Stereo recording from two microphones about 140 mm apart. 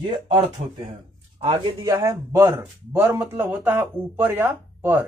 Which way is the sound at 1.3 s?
45° right (ahead or behind).